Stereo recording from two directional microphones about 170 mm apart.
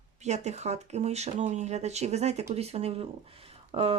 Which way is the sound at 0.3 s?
40° right (ahead or behind).